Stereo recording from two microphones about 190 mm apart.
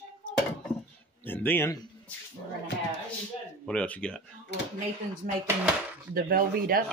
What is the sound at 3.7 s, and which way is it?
Speech, 5° left (ahead or behind).